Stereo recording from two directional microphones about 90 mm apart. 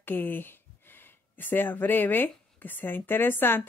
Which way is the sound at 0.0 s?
20° left (ahead or behind).